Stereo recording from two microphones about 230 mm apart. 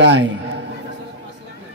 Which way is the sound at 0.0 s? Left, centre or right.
Right.